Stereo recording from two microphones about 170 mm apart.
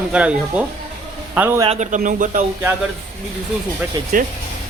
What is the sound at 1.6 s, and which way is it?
Speech, 40° right (ahead or behind).